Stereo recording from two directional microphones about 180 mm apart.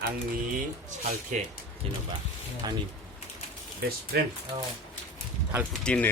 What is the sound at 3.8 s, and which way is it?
Speech, 60° right (ahead or behind).